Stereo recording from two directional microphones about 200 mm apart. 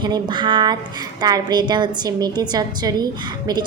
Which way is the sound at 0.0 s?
25° right (ahead or behind).